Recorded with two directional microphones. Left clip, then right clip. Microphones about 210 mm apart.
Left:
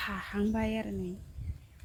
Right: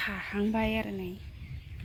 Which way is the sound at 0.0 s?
15° right (ahead or behind).